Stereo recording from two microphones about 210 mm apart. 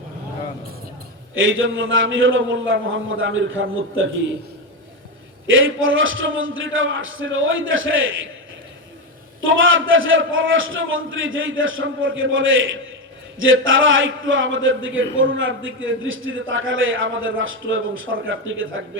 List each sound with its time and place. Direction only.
1.4 s a man's voice: 70° right (ahead or behind)
5.5 s a man's voice: 70° right (ahead or behind)
9.4 s a man's voice: 65° right (ahead or behind)